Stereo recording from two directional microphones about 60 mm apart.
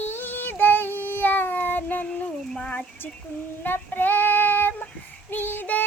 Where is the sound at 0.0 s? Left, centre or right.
Left.